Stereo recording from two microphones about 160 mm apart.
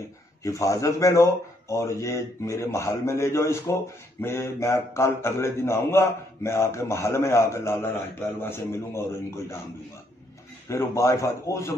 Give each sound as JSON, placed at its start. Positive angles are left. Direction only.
{"t": 0.4, "sound": "a man's voice", "side_deg": 20}
{"t": 10.7, "sound": "a man's voice", "side_deg": 20}